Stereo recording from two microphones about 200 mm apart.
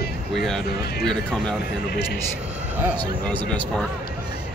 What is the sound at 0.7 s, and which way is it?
Speech, 50° left (ahead or behind).